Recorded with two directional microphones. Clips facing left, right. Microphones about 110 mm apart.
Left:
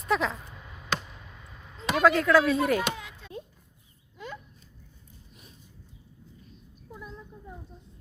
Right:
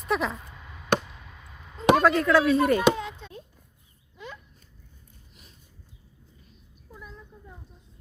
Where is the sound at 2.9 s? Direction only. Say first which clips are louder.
Right 8 dB; 20° right (ahead or behind).